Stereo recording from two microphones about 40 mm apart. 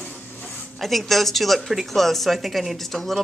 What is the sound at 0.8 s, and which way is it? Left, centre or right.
Speech, centre.